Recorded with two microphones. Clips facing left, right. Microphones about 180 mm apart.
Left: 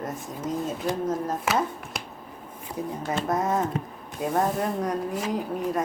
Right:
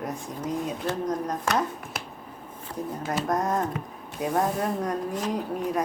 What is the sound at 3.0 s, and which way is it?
Speech, centre (ahead or behind).